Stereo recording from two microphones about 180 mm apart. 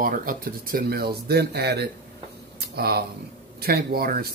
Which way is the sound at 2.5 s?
60° right (ahead or behind).